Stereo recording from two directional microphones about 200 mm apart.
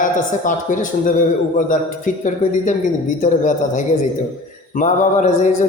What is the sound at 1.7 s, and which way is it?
A man's voice, 40° left (ahead or behind).